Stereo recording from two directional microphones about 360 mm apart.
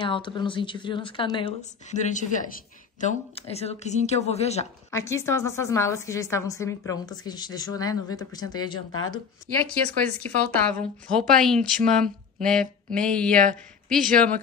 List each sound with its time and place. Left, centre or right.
0.0 s a woman's voice: centre
8.7 s speech: left
10.0 s speech: centre